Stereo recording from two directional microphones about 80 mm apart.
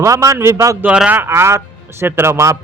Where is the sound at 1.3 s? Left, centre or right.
Right.